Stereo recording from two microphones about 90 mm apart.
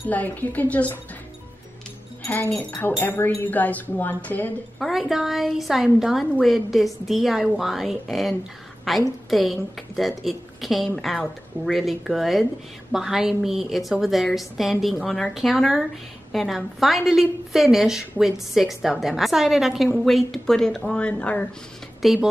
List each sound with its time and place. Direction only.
0.1 s a woman's voice: 20° left (ahead or behind)
3.0 s a woman's voice: 25° left (ahead or behind)
4.7 s a woman's voice: centre (ahead or behind)
22.0 s a woman's voice: centre (ahead or behind)